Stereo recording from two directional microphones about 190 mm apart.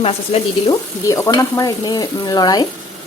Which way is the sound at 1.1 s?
15° left (ahead or behind).